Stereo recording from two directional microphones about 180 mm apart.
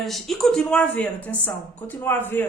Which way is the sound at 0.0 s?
Centre (ahead or behind).